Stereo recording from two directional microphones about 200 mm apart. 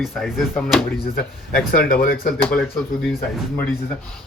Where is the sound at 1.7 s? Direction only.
45° left (ahead or behind).